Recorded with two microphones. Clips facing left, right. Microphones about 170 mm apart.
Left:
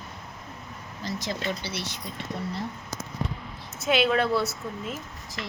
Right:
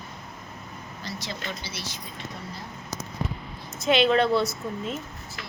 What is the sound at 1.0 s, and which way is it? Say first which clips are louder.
A woman's voice: left 5 dB; 45° left (ahead or behind).